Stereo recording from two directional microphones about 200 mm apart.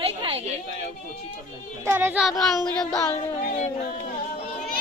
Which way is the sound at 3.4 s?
35° left (ahead or behind).